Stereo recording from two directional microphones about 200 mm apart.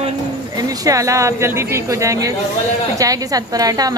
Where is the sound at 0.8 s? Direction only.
15° right (ahead or behind).